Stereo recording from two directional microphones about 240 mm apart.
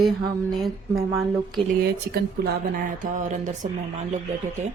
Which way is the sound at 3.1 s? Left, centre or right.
Right.